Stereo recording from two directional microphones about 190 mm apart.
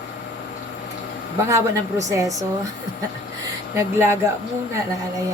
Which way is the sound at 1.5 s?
15° right (ahead or behind).